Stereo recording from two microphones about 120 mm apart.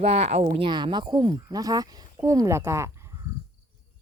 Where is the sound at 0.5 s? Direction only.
45° right (ahead or behind); by 3.2 s 25° right (ahead or behind).